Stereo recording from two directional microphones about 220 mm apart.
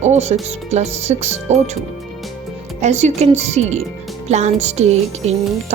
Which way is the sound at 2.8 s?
30° right (ahead or behind).